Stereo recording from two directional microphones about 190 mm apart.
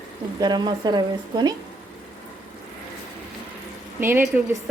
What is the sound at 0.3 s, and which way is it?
Speech, 20° right (ahead or behind).